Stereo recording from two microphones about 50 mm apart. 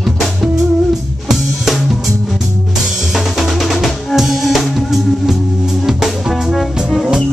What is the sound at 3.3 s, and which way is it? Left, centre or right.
Drum kit, centre.